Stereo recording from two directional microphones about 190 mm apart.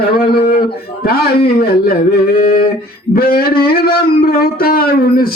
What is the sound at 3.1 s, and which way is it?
Speech, 50° left (ahead or behind).